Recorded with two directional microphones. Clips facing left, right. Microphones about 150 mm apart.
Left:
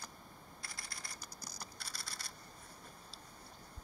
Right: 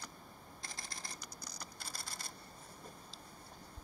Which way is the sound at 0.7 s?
20° right (ahead or behind).